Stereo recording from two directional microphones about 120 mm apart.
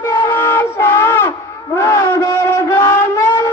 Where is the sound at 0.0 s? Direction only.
20° left (ahead or behind).